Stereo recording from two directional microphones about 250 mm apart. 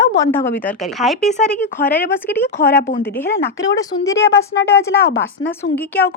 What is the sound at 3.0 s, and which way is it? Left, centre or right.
Speech, centre.